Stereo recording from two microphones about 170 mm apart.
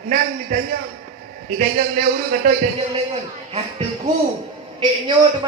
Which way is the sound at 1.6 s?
60° right (ahead or behind).